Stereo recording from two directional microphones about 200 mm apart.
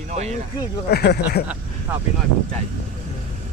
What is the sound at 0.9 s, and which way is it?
Speech, 55° left (ahead or behind).